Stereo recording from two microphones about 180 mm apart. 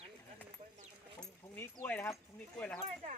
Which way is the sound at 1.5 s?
10° left (ahead or behind).